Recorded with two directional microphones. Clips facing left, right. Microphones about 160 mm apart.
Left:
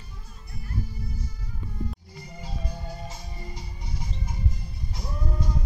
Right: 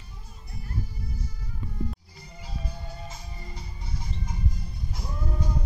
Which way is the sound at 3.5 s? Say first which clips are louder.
Left 1 dB; 15° left (ahead or behind).